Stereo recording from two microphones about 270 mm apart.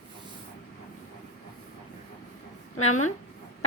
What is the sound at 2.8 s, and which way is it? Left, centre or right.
Speech, left.